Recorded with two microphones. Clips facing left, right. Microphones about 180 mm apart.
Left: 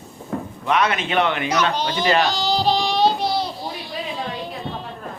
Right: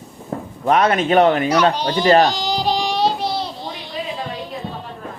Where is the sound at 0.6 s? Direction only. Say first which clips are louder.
Right 5 dB; 45° right (ahead or behind).